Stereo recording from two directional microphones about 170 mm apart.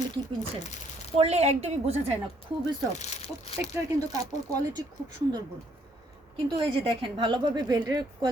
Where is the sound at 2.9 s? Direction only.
40° left (ahead or behind).